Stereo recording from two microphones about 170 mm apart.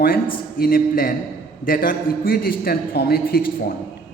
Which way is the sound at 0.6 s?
55° left (ahead or behind).